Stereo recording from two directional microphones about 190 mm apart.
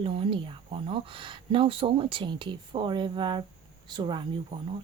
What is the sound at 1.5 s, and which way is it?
Speech, 30° right (ahead or behind).